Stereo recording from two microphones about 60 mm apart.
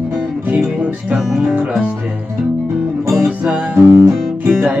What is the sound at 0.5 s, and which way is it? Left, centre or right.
Music, centre.